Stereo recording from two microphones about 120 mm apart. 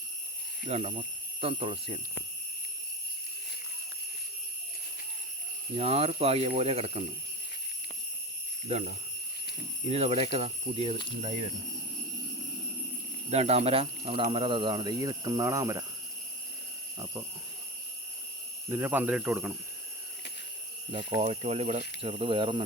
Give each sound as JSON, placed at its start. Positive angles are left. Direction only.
{"t": 0.7, "sound": "speech", "side_deg": -65}
{"t": 5.7, "sound": "speech", "side_deg": -55}
{"t": 9.9, "sound": "speech", "side_deg": -60}
{"t": 13.3, "sound": "speech", "side_deg": -60}
{"t": 18.7, "sound": "speech", "side_deg": -15}
{"t": 20.9, "sound": "speech", "side_deg": -60}
{"t": 22.0, "sound": "speech", "side_deg": -50}